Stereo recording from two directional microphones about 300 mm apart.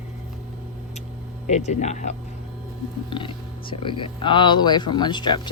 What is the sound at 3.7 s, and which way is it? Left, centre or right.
Speech, centre.